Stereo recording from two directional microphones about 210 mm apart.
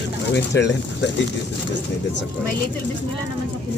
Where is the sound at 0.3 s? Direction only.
55° left (ahead or behind).